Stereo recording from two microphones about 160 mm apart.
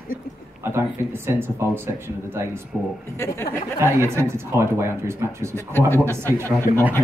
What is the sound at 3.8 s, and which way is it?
Speech, 15° right (ahead or behind).